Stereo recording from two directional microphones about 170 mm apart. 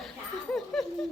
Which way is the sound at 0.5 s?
5° left (ahead or behind).